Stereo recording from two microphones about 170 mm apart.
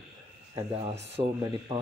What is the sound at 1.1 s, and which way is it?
Speech, 30° right (ahead or behind).